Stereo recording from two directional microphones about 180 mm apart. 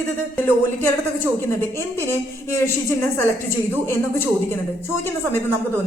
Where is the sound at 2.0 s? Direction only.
15° left (ahead or behind).